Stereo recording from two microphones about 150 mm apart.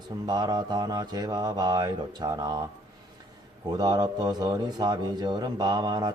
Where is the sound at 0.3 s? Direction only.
25° right (ahead or behind).